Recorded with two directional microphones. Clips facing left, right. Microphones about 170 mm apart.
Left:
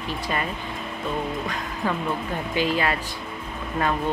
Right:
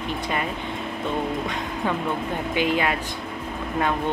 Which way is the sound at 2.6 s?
15° right (ahead or behind).